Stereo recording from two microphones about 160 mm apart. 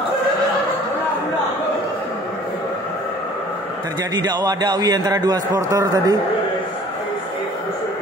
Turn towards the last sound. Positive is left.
turn(degrees=-20)  # may be behind; listen again after turning